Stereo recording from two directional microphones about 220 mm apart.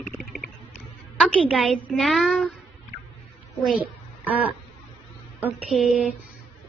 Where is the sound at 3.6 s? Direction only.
5° right (ahead or behind).